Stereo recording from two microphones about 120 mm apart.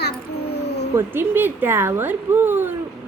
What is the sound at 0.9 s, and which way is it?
Speech, 20° right (ahead or behind).